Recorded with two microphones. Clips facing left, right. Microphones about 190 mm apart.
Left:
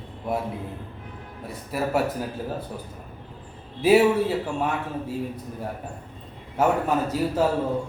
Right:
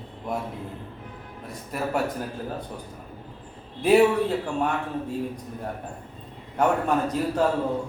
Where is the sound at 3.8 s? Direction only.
5° left (ahead or behind).